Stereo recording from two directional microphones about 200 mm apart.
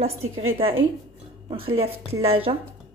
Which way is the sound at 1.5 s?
25° right (ahead or behind).